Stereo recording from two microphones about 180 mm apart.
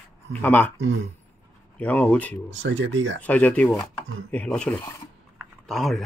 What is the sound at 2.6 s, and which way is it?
Speech, 90° right.